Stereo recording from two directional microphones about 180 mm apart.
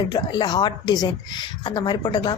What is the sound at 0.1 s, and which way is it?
Speech, 25° left (ahead or behind).